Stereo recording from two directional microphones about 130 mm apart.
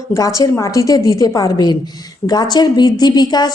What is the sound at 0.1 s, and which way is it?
A woman's voice, 25° left (ahead or behind).